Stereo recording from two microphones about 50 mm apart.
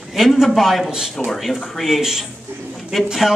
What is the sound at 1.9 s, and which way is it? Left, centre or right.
Speech, centre.